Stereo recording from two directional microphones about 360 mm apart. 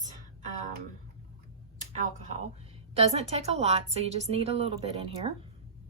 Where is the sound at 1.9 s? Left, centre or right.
Centre.